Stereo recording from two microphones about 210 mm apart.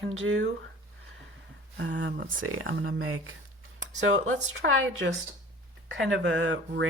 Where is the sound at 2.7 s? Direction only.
55° right (ahead or behind).